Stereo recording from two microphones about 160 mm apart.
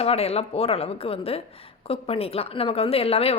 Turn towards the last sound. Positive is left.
turn(degrees=40)  # may be behind; listen again after turning